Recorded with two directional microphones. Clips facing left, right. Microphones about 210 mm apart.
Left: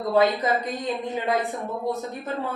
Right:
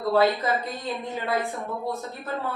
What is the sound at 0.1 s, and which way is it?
A woman's voice, 20° left (ahead or behind).